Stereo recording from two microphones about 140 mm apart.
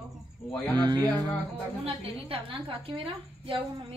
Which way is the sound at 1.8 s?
40° right (ahead or behind).